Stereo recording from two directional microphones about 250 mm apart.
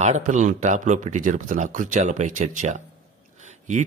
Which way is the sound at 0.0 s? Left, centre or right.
Right.